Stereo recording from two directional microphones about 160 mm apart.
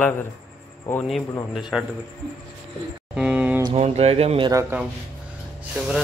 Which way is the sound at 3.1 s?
10° right (ahead or behind).